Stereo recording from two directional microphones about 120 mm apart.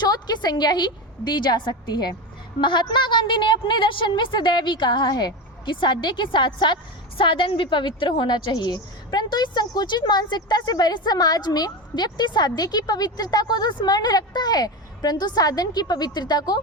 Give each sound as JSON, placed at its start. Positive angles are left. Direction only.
{"t": 0.0, "sound": "a woman's voice", "side_deg": 35}